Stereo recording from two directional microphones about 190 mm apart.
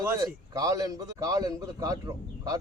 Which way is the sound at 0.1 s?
20° right (ahead or behind).